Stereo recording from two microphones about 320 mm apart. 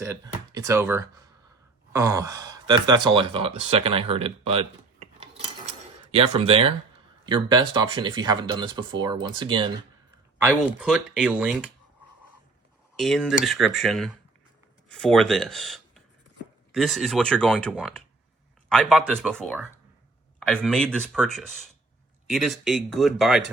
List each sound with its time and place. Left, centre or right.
0.0 s speech: centre
6.1 s speech: centre
10.8 s speech: centre
13.0 s speech: centre